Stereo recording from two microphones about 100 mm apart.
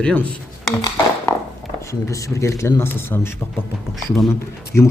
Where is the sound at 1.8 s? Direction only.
30° left (ahead or behind).